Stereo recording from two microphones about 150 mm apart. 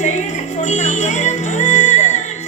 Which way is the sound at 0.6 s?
50° left (ahead or behind).